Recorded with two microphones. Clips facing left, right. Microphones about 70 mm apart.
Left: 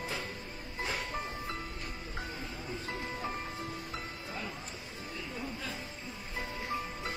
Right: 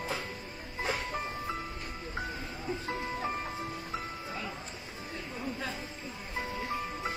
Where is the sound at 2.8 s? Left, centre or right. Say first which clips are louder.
Right 3 dB; right.